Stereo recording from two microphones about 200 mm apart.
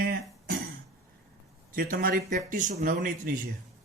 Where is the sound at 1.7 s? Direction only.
45° right (ahead or behind).